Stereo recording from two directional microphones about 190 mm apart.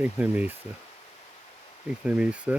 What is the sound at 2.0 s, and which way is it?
Speech, 5° right (ahead or behind).